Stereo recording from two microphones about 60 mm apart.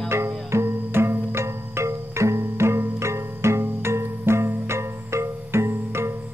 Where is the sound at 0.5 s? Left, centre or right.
Right.